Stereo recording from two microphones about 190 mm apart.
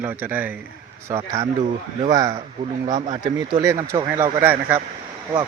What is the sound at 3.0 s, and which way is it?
Speech, 25° right (ahead or behind).